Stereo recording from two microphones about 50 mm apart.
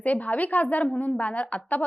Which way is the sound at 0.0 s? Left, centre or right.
Left.